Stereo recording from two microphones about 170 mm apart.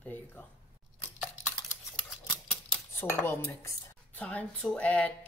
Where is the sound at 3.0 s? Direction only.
10° left (ahead or behind).